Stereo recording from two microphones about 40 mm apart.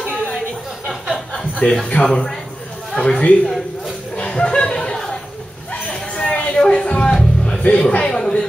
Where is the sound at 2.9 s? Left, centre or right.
Left.